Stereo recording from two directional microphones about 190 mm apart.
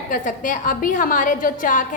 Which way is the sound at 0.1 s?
45° left (ahead or behind).